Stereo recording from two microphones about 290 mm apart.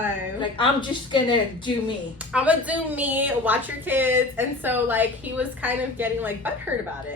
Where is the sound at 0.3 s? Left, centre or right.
Centre.